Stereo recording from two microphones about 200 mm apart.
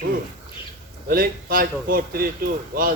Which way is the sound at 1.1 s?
45° right (ahead or behind).